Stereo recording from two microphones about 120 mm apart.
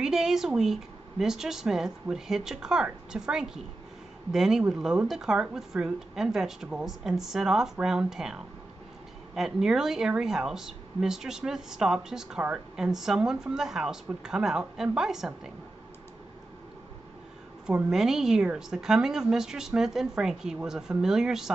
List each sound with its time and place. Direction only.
0.0 s speech: 5° right (ahead or behind)
17.6 s speech: 5° right (ahead or behind)